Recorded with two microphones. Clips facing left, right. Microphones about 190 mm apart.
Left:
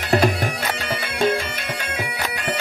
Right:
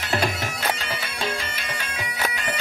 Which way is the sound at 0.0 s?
55° left (ahead or behind).